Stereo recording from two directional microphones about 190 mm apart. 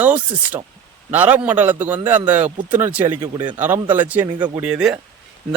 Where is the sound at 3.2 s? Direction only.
25° right (ahead or behind).